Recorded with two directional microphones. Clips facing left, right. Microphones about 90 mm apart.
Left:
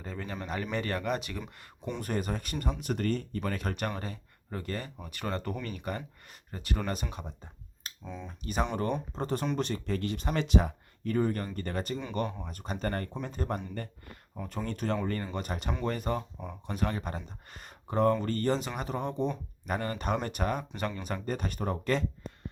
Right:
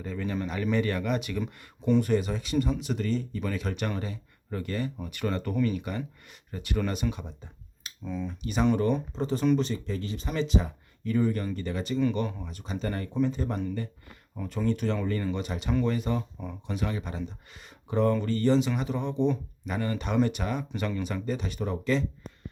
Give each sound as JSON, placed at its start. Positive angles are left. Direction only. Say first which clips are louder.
{"t": 0.0, "sound": "speech", "louder": "right 6 dB", "side_deg": 35}
{"t": 2.0, "sound": "speech", "louder": "right 7 dB", "side_deg": 45}
{"t": 8.0, "sound": "speech", "louder": "right 8 dB", "side_deg": 20}
{"t": 8.3, "sound": "speech", "louder": "left 1 dB", "side_deg": 40}
{"t": 9.1, "sound": "speech", "louder": "right 6 dB", "side_deg": 50}
{"t": 14.3, "sound": "speech", "louder": "right 7 dB", "side_deg": 35}